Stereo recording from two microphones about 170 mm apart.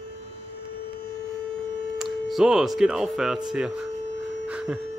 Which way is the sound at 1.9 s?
Centre (ahead or behind).